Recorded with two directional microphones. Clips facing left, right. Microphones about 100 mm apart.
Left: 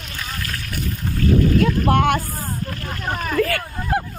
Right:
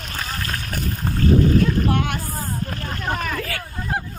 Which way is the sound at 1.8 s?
60° left (ahead or behind).